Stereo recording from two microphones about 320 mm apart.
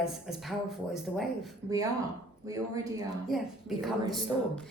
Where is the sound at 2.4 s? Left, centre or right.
Centre.